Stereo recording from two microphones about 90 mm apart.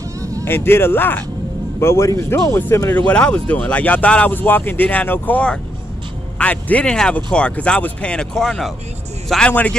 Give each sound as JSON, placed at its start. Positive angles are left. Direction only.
{"t": 0.2, "sound": "a sound", "side_deg": -35}
{"t": 0.5, "sound": "speech", "side_deg": 25}
{"t": 3.0, "sound": "speech", "side_deg": 15}
{"t": 9.5, "sound": "speech", "side_deg": 20}